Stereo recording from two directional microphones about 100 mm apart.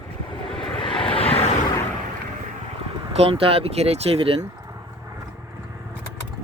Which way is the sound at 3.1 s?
75° right (ahead or behind).